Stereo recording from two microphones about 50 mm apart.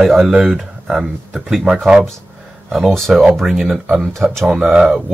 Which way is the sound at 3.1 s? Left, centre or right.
Centre.